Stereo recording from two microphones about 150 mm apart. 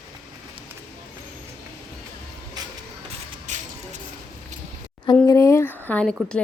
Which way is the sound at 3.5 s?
50° right (ahead or behind).